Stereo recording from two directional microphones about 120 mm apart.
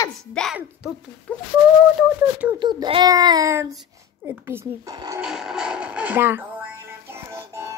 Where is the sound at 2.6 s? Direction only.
40° right (ahead or behind); by 4.9 s 20° right (ahead or behind).